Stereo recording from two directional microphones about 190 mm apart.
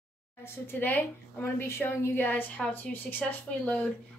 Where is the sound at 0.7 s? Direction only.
10° left (ahead or behind).